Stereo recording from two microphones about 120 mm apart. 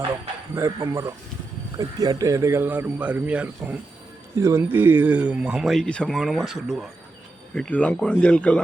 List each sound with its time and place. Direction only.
0.5 s speech: 25° right (ahead or behind)
4.4 s speech: 25° right (ahead or behind); by 6.9 s centre (ahead or behind)
7.5 s speech: 10° left (ahead or behind)